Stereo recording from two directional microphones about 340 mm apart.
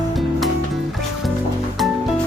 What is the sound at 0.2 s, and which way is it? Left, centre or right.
Music, centre.